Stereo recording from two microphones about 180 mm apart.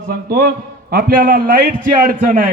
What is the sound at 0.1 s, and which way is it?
A man's voice, 60° right (ahead or behind).